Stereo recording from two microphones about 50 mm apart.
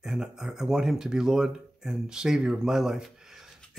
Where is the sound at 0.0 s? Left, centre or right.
Centre.